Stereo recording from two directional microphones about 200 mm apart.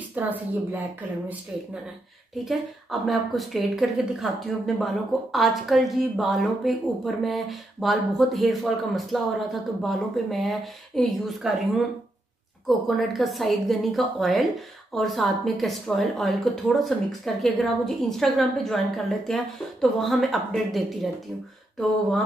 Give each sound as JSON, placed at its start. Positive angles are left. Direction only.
{"t": 0.1, "sound": "a woman's voice", "side_deg": -10}
{"t": 2.4, "sound": "speech", "side_deg": 0}
{"t": 12.6, "sound": "speech", "side_deg": 0}